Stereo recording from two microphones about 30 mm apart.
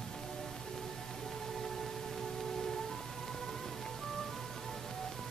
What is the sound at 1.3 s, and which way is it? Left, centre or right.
Music, centre.